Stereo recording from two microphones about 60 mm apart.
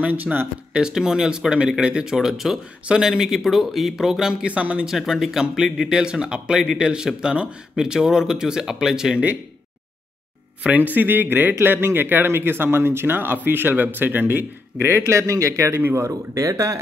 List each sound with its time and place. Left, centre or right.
0.0 s speech: right
0.7 s speech: centre
4.8 s speech: centre
10.6 s speech: centre
11.0 s a man's voice: right
14.9 s speech: right
15.7 s a man's voice: right
16.3 s speech: right